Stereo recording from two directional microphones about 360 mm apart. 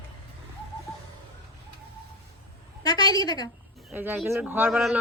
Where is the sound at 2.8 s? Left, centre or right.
Centre.